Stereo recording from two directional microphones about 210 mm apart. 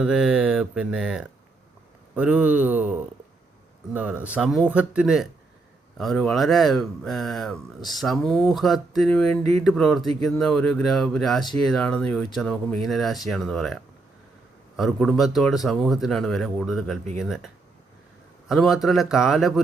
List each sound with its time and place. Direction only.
0.0 s speech: 5° right (ahead or behind)
3.9 s speech: 5° right (ahead or behind)
14.8 s speech: centre (ahead or behind)